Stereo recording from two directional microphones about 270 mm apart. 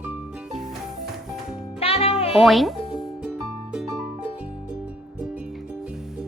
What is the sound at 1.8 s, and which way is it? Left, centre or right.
Music, left.